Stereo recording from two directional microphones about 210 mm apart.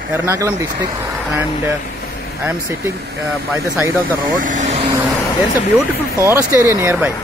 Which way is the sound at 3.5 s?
10° right (ahead or behind).